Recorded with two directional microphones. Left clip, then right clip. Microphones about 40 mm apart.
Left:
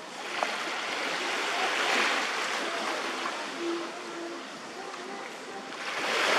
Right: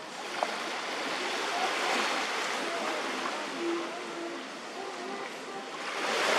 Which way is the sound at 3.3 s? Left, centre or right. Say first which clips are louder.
Even; centre.